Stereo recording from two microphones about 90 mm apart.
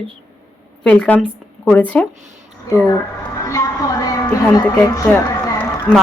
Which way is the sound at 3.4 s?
40° left (ahead or behind).